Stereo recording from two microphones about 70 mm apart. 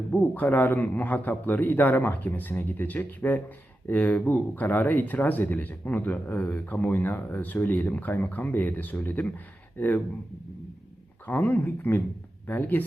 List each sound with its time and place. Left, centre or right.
0.1 s speech: left
11.3 s speech: left